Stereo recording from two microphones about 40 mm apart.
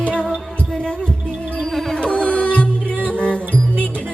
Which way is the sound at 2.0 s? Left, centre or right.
Left.